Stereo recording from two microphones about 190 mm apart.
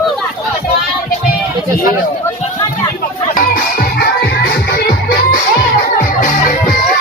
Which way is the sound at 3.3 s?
50° left (ahead or behind).